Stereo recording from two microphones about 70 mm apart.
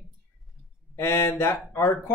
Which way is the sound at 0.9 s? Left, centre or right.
Left.